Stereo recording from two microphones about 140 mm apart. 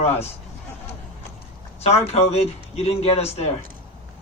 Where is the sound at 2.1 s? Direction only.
50° left (ahead or behind).